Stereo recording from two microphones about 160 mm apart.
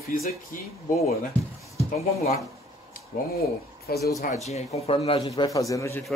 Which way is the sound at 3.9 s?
20° left (ahead or behind).